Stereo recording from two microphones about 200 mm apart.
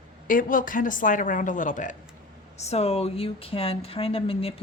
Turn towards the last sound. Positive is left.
turn(degrees=30)  # may be behind; listen again after turning